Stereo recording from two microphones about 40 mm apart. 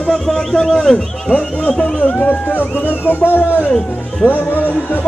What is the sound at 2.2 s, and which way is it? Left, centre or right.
Speech, left.